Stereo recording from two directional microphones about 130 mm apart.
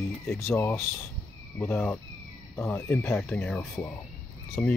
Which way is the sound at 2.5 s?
15° left (ahead or behind).